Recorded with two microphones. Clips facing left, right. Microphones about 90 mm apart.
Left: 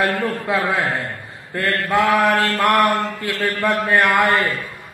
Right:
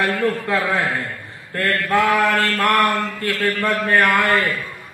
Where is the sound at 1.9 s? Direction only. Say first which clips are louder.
Left 1 dB; 20° left (ahead or behind).